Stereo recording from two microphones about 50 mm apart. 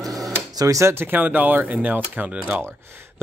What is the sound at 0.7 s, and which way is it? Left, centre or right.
Speech, right.